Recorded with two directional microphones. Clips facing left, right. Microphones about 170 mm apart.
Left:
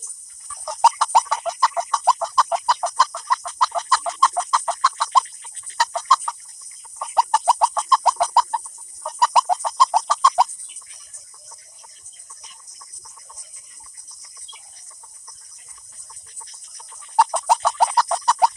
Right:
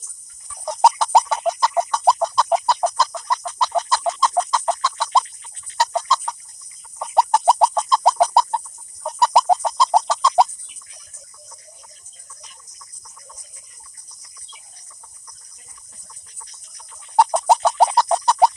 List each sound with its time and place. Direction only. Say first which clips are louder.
0.4 s frog: right 2 dB; 25° right (ahead or behind)
1.9 s chicken: right 3 dB; 25° right (ahead or behind)
7.0 s a sound: right 3 dB; 25° right (ahead or behind)
9.0 s chicken: right 3 dB; 25° right (ahead or behind)
17.2 s frog: right 3 dB; 25° right (ahead or behind)